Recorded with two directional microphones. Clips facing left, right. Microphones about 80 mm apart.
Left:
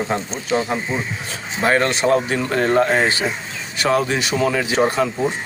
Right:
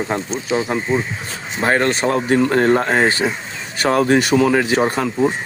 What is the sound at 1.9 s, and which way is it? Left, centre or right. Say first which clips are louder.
Speech: right 1 dB; right.